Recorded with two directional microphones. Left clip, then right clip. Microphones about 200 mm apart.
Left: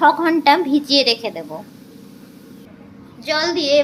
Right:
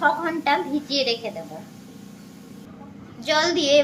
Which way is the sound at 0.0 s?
40° left (ahead or behind).